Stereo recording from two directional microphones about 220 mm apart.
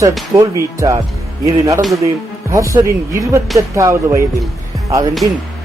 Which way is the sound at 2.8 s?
10° right (ahead or behind).